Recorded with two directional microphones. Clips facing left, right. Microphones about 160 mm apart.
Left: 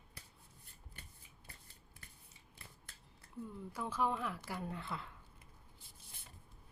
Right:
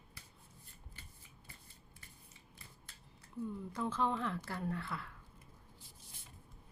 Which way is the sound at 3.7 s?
10° left (ahead or behind).